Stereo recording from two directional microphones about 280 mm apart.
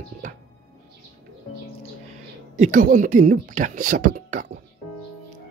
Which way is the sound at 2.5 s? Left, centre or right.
Right.